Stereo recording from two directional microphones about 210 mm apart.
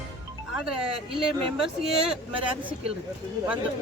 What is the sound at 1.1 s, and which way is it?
Speech, 25° right (ahead or behind).